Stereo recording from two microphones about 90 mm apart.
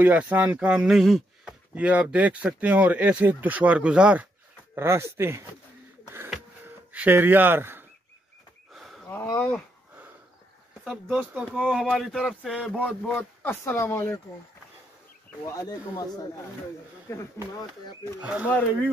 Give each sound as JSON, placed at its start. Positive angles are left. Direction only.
{"t": 0.0, "sound": "speech", "side_deg": -15}
{"t": 1.8, "sound": "speech", "side_deg": -15}
{"t": 4.7, "sound": "speech", "side_deg": -30}
{"t": 6.9, "sound": "speech", "side_deg": -20}
{"t": 8.7, "sound": "a sound", "side_deg": 0}
{"t": 9.1, "sound": "speech", "side_deg": 25}
{"t": 10.8, "sound": "speech", "side_deg": -5}
{"t": 11.5, "sound": "a sound", "side_deg": 0}
{"t": 12.7, "sound": "speech", "side_deg": 15}
{"t": 15.4, "sound": "speech", "side_deg": 40}
{"t": 18.2, "sound": "speech", "side_deg": -15}